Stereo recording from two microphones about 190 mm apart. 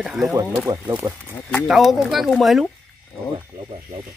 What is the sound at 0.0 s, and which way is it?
Speech, centre (ahead or behind).